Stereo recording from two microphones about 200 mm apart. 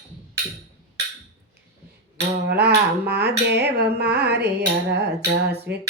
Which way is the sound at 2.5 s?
55° right (ahead or behind).